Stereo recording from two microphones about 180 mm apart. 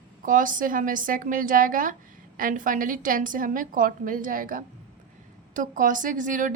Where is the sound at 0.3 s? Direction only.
50° right (ahead or behind).